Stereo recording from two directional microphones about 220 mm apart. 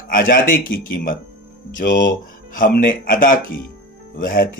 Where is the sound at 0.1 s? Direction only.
40° left (ahead or behind).